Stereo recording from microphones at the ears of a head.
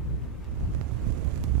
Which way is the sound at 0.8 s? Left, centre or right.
Right.